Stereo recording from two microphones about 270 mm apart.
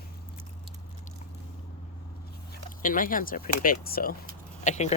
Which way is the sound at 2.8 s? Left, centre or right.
Left.